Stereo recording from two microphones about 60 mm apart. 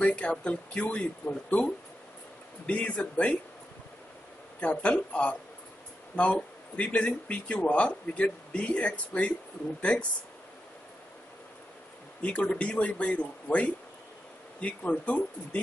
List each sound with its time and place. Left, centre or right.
0.0 s a man's voice: centre
2.6 s a man's voice: centre
4.6 s a man's voice: left
12.2 s a man's voice: centre